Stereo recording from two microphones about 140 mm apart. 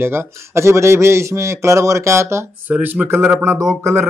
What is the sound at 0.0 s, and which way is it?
Speech, 20° right (ahead or behind).